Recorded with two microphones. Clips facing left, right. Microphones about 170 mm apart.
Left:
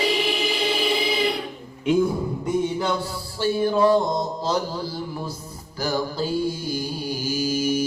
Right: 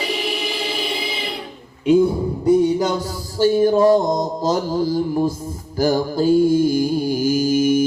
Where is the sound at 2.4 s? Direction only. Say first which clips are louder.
Right 9 dB; 40° right (ahead or behind).